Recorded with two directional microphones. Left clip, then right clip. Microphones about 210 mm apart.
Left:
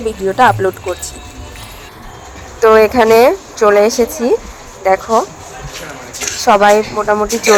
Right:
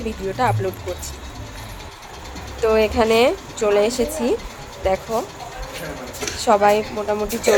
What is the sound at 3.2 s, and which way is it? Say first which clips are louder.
Speech: left 8 dB; 15° left (ahead or behind).